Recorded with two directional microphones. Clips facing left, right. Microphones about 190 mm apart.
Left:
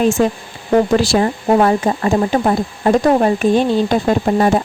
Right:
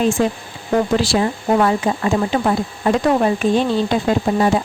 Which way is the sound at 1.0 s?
45° left (ahead or behind).